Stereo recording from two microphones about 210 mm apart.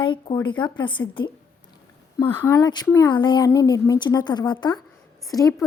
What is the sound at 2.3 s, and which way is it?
A woman's voice, 15° left (ahead or behind).